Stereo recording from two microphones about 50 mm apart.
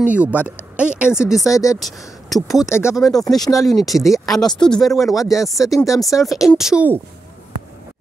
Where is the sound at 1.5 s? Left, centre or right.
Left.